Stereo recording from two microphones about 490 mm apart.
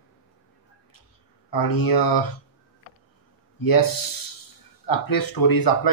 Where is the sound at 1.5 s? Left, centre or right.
Left.